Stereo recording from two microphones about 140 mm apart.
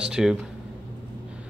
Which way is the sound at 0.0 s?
5° right (ahead or behind).